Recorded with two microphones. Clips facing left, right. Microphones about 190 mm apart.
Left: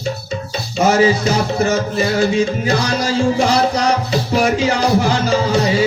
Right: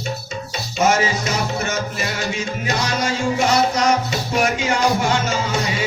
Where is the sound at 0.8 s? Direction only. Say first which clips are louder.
Left 5 dB; 35° left (ahead or behind).